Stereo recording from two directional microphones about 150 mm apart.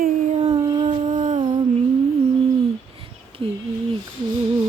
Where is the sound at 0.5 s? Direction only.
25° right (ahead or behind).